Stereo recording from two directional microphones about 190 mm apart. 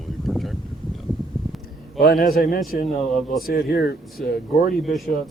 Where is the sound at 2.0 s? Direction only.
55° left (ahead or behind).